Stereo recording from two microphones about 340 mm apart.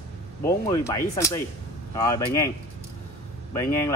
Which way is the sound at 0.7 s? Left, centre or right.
Centre.